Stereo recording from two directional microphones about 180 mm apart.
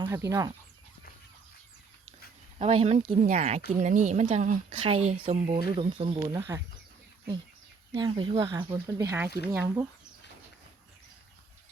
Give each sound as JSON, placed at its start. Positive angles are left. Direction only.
{"t": 0.0, "sound": "speech", "side_deg": -15}
{"t": 2.6, "sound": "speech", "side_deg": -35}
{"t": 7.9, "sound": "speech", "side_deg": -25}